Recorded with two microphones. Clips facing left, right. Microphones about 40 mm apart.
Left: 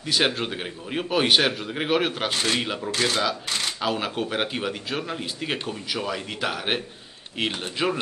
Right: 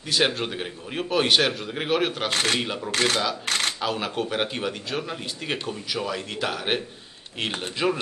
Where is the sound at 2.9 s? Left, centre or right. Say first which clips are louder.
Right 2 dB; right.